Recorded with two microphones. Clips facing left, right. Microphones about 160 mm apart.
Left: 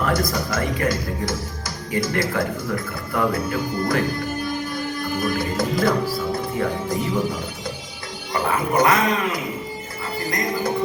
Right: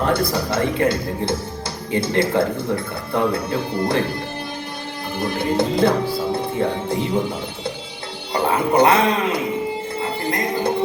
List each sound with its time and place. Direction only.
0.0 s speech: 30° right (ahead or behind)
5.1 s speech: 30° right (ahead or behind)
10.0 s music: 30° right (ahead or behind)